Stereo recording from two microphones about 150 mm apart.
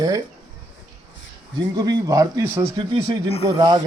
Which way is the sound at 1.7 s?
30° right (ahead or behind).